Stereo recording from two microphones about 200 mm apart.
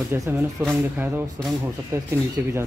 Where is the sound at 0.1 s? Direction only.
10° right (ahead or behind).